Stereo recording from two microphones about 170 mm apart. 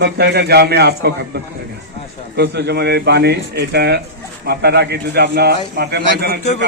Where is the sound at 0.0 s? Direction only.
75° right (ahead or behind).